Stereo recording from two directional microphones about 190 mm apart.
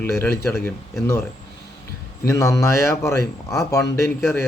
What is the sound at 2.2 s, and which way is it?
A man's voice, 15° left (ahead or behind).